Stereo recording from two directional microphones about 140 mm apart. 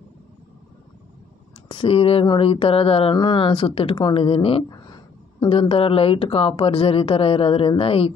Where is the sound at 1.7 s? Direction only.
40° left (ahead or behind).